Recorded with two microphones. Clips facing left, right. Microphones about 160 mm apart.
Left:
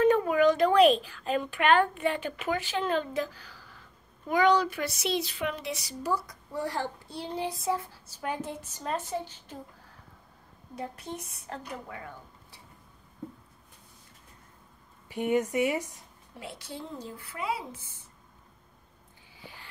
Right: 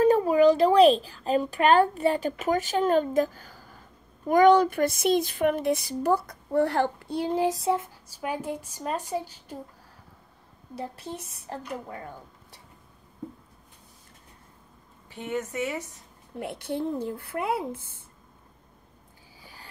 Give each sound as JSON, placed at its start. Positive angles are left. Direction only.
{"t": 0.0, "sound": "speech", "side_deg": -35}
{"t": 7.4, "sound": "a woman's voice", "side_deg": -35}
{"t": 8.2, "sound": "a woman's voice", "side_deg": -10}
{"t": 10.8, "sound": "a woman's voice", "side_deg": -35}
{"t": 15.0, "sound": "speech", "side_deg": 15}
{"t": 16.3, "sound": "speech", "side_deg": -55}
{"t": 19.4, "sound": "a sound", "side_deg": -40}